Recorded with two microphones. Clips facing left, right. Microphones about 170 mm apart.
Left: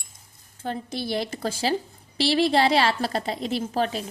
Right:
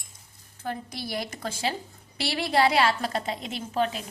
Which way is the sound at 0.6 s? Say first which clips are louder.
Left 4 dB; 25° left (ahead or behind).